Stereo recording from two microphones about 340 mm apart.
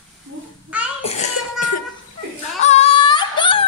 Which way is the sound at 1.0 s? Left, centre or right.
Centre.